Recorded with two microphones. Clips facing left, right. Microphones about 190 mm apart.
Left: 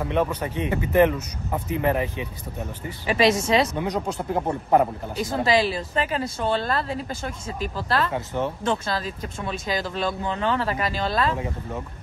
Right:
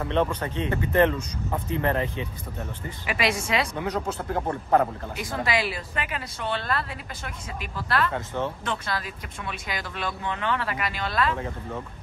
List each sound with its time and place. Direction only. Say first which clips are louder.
0.0 s speech: left 1 dB; 10° left (ahead or behind)
5.1 s speech: left 9 dB; 25° left (ahead or behind)
8.3 s speech: left 3 dB; 15° left (ahead or behind)
8.6 s speech: left 5 dB; 30° left (ahead or behind)
11.3 s speech: left 2 dB; 15° left (ahead or behind)